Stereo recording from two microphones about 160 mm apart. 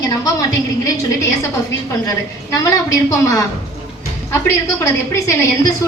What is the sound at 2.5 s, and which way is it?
A woman's voice, 20° left (ahead or behind).